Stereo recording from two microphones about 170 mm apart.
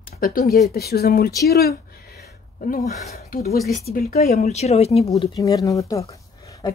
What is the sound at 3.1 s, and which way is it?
Speech, 60° left (ahead or behind).